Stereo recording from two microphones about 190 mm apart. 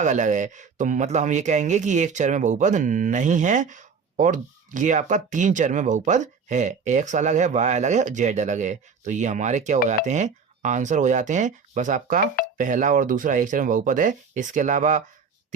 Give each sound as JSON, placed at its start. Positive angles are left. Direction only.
{"t": 0.0, "sound": "speech", "side_deg": -40}